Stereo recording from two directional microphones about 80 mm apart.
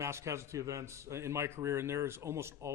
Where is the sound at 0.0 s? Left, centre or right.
Right.